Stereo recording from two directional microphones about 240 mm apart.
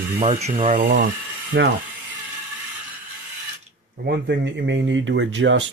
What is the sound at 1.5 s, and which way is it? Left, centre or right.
Speech, right.